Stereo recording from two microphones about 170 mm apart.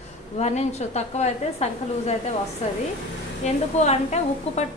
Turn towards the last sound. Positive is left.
turn(degrees=40)  # may be behind; listen again after turning